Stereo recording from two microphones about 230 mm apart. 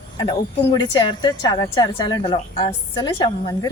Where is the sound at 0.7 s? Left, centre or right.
Centre.